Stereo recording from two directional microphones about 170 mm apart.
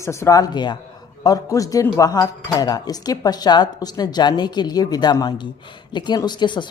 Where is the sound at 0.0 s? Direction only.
15° left (ahead or behind).